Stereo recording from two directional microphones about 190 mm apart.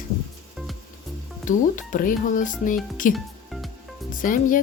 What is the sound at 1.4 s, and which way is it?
Speech, 45° left (ahead or behind).